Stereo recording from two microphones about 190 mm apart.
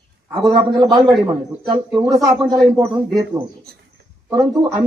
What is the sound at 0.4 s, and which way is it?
A man's voice, 20° right (ahead or behind).